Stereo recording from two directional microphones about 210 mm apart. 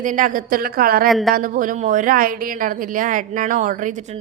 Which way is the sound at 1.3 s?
40° right (ahead or behind).